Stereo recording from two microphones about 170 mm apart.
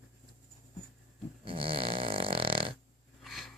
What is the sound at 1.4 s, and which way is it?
Snoring, 30° right (ahead or behind).